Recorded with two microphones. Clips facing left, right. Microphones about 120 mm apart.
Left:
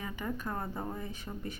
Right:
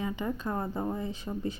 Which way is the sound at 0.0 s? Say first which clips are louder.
Right 5 dB; 20° right (ahead or behind).